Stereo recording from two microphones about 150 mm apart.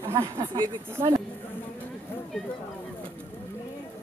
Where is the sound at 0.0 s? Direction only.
20° right (ahead or behind).